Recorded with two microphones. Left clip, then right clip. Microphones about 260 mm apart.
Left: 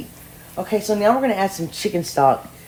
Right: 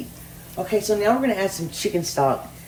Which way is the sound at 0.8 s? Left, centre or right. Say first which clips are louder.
Left 4 dB; left.